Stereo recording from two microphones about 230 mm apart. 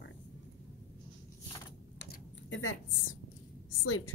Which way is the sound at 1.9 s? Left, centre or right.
Left.